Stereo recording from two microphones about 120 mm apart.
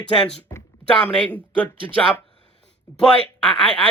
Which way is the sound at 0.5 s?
25° left (ahead or behind).